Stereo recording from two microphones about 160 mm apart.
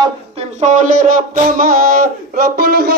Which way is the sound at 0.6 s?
50° right (ahead or behind).